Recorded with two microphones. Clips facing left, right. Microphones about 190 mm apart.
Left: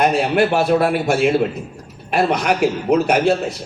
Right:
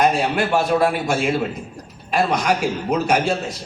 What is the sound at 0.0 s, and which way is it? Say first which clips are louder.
A man's voice: left 3 dB; 60° left (ahead or behind).